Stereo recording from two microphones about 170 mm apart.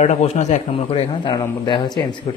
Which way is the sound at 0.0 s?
40° left (ahead or behind).